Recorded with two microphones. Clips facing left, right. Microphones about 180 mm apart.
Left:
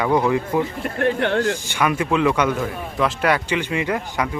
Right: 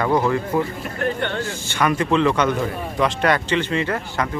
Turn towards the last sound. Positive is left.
turn(degrees=10)  # may be behind; listen again after turning